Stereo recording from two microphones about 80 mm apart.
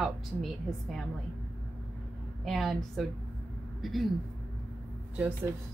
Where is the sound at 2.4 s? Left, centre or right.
Centre.